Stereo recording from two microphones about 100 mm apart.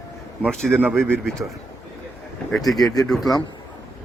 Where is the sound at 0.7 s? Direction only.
20° right (ahead or behind).